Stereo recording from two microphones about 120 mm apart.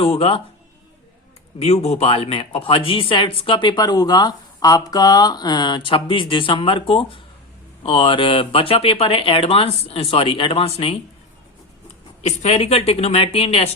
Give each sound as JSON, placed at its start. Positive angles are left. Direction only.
{"t": 0.0, "sound": "speech", "side_deg": 55}
{"t": 1.5, "sound": "speech", "side_deg": 60}
{"t": 12.2, "sound": "speech", "side_deg": 60}